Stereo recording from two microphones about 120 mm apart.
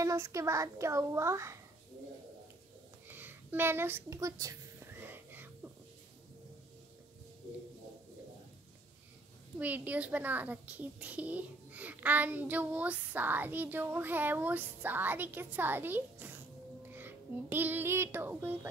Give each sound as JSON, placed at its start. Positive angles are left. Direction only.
{"t": 0.0, "sound": "a child's voice", "side_deg": -25}
{"t": 3.1, "sound": "a sound", "side_deg": -15}
{"t": 9.6, "sound": "a child's voice", "side_deg": -15}